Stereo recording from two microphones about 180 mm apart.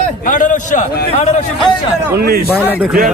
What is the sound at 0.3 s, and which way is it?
Speech, 45° left (ahead or behind).